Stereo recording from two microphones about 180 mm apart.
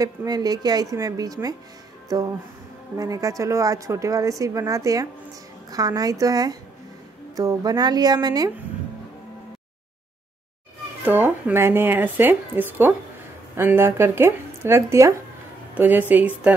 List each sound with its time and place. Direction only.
0.0 s a woman's voice: 20° right (ahead or behind)
11.1 s speech: 10° right (ahead or behind)